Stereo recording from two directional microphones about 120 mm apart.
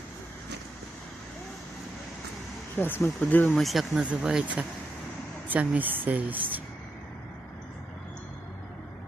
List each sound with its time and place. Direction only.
2.7 s speech: 15° left (ahead or behind)
3.5 s speech: centre (ahead or behind)